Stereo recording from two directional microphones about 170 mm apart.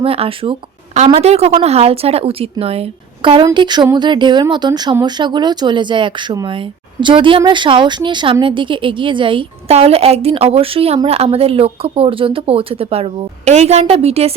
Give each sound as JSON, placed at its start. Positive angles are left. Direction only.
{"t": 0.0, "sound": "speech", "side_deg": -35}